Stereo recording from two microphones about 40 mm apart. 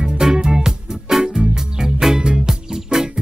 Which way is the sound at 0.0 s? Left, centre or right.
Centre.